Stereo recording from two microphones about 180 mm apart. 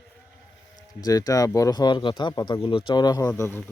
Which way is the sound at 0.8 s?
20° left (ahead or behind).